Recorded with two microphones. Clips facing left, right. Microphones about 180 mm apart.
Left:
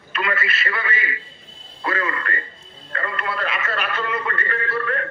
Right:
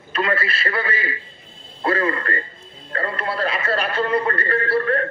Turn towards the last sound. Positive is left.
turn(degrees=-35)  # may be behind; listen again after turning